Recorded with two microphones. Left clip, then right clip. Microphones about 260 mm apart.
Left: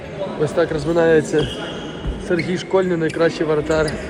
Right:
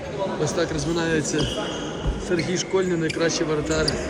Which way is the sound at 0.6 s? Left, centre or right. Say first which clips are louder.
Left 11 dB; centre.